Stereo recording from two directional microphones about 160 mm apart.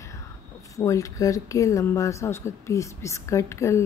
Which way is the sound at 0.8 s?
20° left (ahead or behind).